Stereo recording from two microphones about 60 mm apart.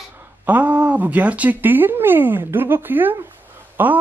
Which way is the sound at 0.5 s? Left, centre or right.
Right.